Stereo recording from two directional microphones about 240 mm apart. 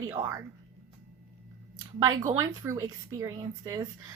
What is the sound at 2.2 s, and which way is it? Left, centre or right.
A woman's voice, centre.